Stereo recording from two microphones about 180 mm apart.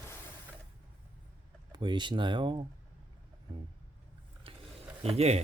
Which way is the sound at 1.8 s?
25° right (ahead or behind).